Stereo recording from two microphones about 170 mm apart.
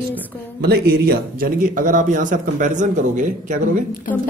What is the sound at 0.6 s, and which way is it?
A man's voice, 70° right (ahead or behind).